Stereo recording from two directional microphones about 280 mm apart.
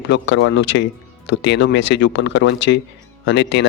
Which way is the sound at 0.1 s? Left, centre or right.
Left.